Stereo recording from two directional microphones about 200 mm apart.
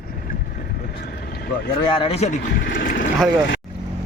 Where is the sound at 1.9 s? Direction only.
25° left (ahead or behind); by 3.1 s 40° left (ahead or behind).